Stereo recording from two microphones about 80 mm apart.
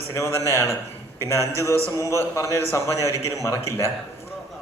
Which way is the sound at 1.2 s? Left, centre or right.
Right.